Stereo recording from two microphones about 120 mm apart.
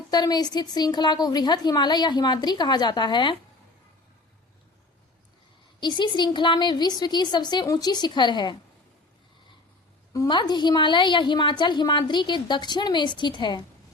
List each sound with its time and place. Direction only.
0.1 s a woman's voice: 35° left (ahead or behind)
5.8 s a woman's voice: 40° left (ahead or behind)
10.2 s a woman's voice: 40° left (ahead or behind)